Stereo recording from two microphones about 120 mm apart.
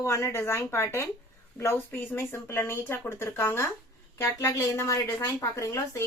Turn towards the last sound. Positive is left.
turn(degrees=25)  # may be behind; listen again after turning